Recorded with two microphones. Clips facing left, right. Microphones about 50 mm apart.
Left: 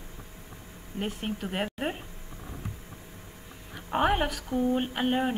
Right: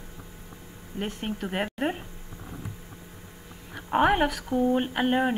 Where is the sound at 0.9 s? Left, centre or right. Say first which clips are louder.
Right 1 dB; centre.